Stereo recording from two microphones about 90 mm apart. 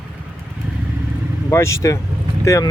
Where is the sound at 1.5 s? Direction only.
30° left (ahead or behind).